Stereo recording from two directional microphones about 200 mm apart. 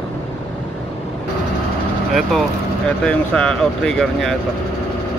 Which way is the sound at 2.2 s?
Centre (ahead or behind).